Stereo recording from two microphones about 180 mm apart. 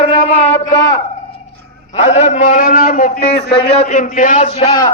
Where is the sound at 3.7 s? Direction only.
35° left (ahead or behind).